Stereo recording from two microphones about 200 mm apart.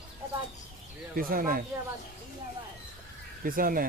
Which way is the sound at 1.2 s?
45° right (ahead or behind).